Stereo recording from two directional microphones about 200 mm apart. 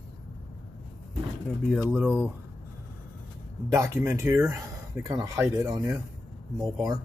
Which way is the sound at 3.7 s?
15° right (ahead or behind).